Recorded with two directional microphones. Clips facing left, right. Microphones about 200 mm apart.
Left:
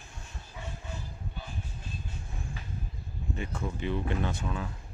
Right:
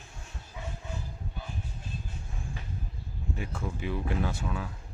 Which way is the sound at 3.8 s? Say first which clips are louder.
Even; 5° right (ahead or behind).